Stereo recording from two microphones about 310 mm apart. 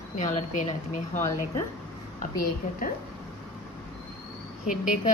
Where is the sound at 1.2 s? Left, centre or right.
Centre.